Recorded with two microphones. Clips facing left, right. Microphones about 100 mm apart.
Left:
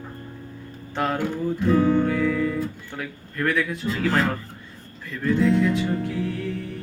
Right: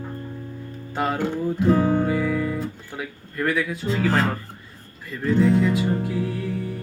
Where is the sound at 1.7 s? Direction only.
40° right (ahead or behind).